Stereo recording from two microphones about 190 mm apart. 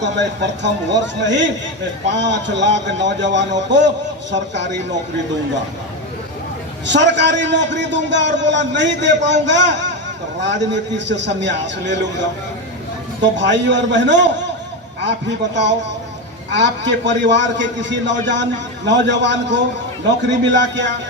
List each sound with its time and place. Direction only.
0.0 s a man's voice: 70° right (ahead or behind)
6.8 s a man's voice: 70° right (ahead or behind)
13.3 s a man's voice: 70° right (ahead or behind)